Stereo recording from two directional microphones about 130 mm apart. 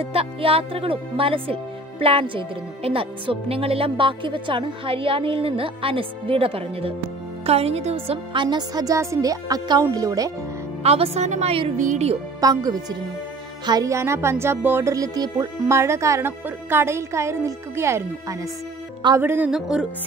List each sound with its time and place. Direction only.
0.0 s a woman's voice: 45° right (ahead or behind); by 10.3 s 25° right (ahead or behind)
10.8 s speech: 55° right (ahead or behind)
11.7 s speech: 75° right (ahead or behind)
12.4 s a woman's voice: 30° right (ahead or behind)
19.5 s music: 5° right (ahead or behind)